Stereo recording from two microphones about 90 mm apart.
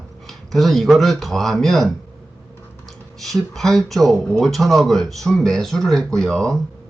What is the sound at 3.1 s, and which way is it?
Speech, centre (ahead or behind).